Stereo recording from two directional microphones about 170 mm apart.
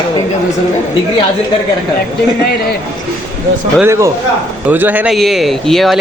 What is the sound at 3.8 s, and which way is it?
A man's voice, 15° right (ahead or behind).